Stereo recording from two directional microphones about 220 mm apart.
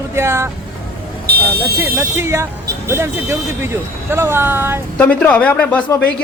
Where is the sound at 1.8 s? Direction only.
10° right (ahead or behind).